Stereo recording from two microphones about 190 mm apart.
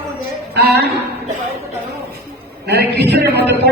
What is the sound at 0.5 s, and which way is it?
Speech, 60° right (ahead or behind).